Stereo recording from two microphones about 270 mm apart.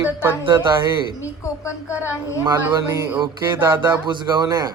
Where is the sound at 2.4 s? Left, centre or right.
Centre.